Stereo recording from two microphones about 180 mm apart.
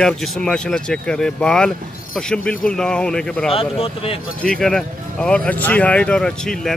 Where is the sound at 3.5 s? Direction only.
30° left (ahead or behind).